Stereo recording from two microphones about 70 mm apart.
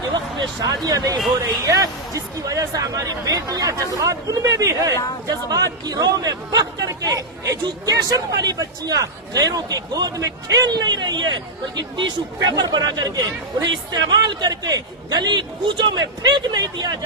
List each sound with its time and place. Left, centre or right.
0.0 s a sound: right
0.9 s speech: right
5.3 s speech: right